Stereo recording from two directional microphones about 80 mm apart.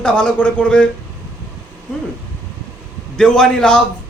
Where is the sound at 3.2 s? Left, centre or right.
Centre.